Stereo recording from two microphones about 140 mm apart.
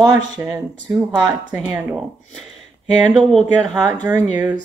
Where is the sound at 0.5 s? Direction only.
25° right (ahead or behind).